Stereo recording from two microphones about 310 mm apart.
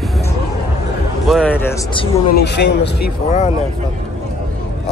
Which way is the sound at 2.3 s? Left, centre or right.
Left.